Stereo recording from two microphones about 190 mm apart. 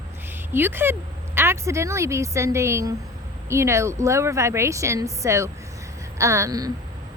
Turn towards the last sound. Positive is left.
turn(degrees=-20)  # may be behind; listen again after turning